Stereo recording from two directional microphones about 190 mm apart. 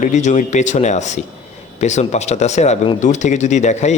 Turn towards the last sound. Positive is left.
turn(degrees=35)  # may be behind; listen again after turning